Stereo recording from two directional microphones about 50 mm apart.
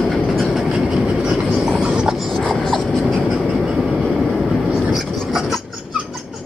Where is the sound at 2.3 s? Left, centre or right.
Centre.